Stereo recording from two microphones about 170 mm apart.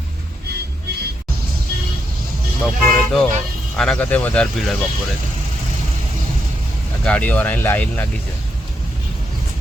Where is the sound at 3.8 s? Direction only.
5° left (ahead or behind).